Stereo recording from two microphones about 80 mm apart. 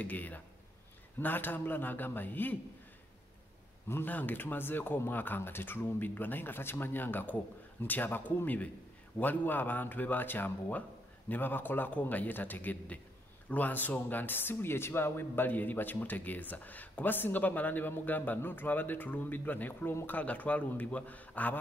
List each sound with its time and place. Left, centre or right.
0.0 s a man's voice: left
3.9 s a man's voice: left
20.2 s a man's voice: centre